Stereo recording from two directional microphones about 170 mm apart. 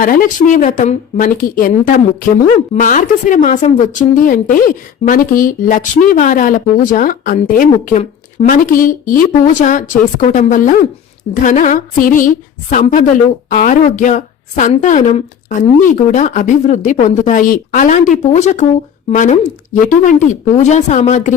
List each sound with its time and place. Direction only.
0.0 s speech: 55° left (ahead or behind)